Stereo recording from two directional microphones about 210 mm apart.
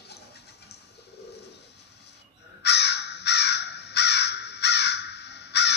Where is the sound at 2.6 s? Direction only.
55° left (ahead or behind).